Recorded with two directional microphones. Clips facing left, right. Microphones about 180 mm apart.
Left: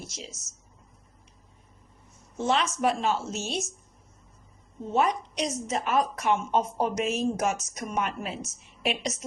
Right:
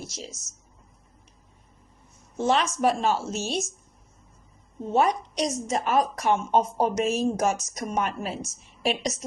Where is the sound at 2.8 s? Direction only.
45° right (ahead or behind).